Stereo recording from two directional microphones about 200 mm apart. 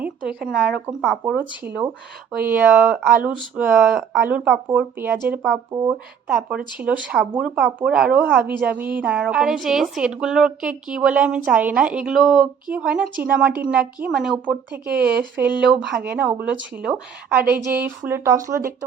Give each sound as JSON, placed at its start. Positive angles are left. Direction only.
{"t": 0.0, "sound": "a woman's voice", "side_deg": -5}
{"t": 14.8, "sound": "speech", "side_deg": -50}
{"t": 15.2, "sound": "speech", "side_deg": -10}